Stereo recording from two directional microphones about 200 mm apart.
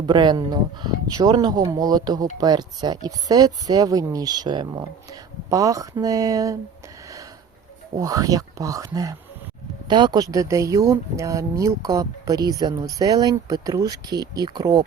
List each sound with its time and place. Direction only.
0.0 s speech: 20° right (ahead or behind)
7.9 s speech: 15° right (ahead or behind)